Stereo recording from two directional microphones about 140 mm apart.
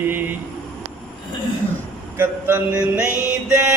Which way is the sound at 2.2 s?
15° right (ahead or behind).